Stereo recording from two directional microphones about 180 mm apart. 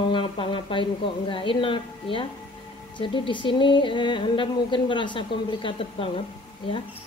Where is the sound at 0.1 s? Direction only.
30° left (ahead or behind).